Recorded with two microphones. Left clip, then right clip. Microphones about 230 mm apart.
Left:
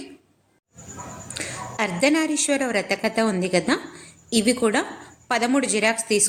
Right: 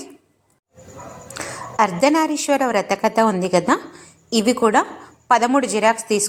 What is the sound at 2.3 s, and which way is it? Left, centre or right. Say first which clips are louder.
Speech: right 4 dB; centre.